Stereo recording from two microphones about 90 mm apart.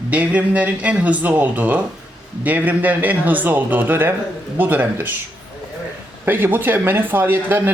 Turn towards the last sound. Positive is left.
turn(degrees=-25)  # may be behind; listen again after turning